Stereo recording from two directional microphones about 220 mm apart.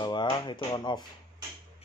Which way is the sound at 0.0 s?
20° left (ahead or behind).